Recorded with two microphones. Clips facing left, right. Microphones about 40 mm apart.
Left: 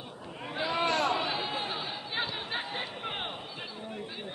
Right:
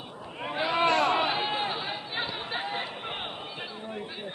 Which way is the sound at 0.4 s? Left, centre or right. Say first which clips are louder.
Right 4 dB; right.